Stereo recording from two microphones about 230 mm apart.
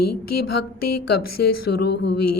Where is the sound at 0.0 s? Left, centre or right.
Left.